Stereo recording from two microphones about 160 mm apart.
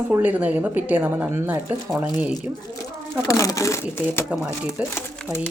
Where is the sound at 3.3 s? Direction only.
20° left (ahead or behind).